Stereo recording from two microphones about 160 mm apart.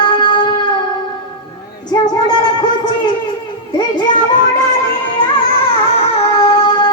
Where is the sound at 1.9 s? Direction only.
25° left (ahead or behind).